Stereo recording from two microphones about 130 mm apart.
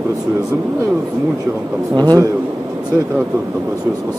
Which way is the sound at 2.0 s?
30° right (ahead or behind).